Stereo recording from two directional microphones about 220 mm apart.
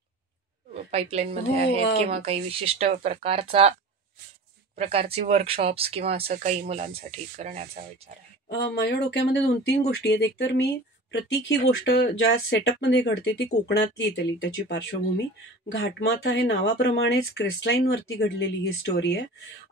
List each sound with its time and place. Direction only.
0.7 s speech: 30° right (ahead or behind)
4.7 s speech: 25° right (ahead or behind)
6.2 s speech: 35° right (ahead or behind)
8.5 s speech: 55° left (ahead or behind)
16.2 s speech: 50° left (ahead or behind)